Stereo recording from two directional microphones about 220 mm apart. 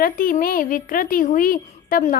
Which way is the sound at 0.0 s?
40° left (ahead or behind).